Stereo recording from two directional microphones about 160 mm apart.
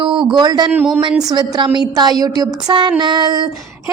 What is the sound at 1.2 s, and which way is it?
Speech, 25° right (ahead or behind).